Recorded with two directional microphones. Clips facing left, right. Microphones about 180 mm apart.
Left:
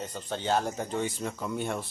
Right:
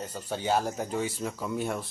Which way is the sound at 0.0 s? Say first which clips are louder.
Right 1 dB; 5° right (ahead or behind).